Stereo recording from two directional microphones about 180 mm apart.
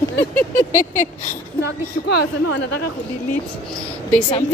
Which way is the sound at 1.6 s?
65° left (ahead or behind).